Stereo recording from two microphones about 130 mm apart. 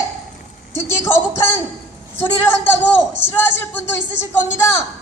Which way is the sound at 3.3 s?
15° left (ahead or behind).